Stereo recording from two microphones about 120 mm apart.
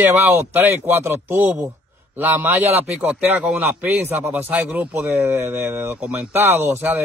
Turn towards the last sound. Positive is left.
turn(degrees=-15)  # may be behind; listen again after turning